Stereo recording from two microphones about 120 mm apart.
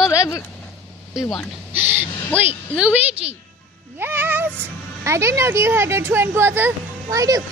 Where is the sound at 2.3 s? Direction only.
15° right (ahead or behind).